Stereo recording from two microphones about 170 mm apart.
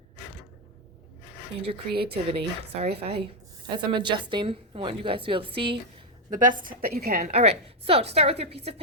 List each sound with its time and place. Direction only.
2.0 s a woman's voice: 35° right (ahead or behind)
6.3 s a woman's voice: 50° right (ahead or behind)
7.3 s a woman's voice: 35° right (ahead or behind)